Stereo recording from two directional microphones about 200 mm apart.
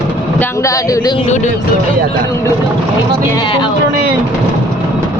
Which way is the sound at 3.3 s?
25° left (ahead or behind).